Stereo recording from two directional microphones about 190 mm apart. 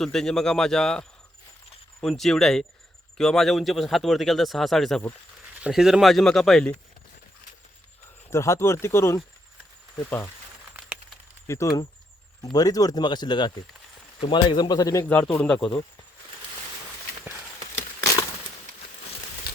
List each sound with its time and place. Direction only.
0.0 s speech: 5° left (ahead or behind)
8.3 s speech: 15° left (ahead or behind)
10.8 s a sound: 5° right (ahead or behind)
11.4 s speech: 15° left (ahead or behind)